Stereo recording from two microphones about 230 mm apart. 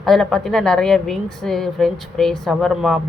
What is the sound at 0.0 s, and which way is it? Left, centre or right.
A woman's voice, centre.